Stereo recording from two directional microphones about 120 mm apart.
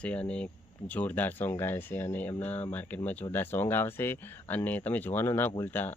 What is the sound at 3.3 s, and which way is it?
Speech, 15° left (ahead or behind).